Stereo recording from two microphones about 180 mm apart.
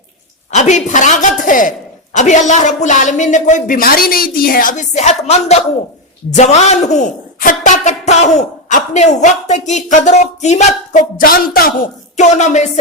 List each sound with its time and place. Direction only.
0.5 s a woman's voice: 40° left (ahead or behind)
11.2 s a woman's voice: 55° left (ahead or behind)